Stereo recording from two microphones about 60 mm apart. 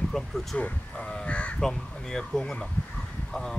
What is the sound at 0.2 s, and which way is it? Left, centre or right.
Speech, centre.